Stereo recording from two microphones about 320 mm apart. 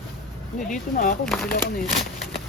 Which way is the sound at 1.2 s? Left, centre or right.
Centre.